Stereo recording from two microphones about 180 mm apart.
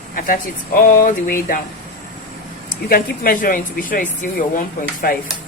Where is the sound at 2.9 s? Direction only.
50° left (ahead or behind).